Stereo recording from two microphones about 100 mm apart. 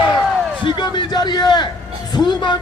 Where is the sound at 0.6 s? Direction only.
50° left (ahead or behind).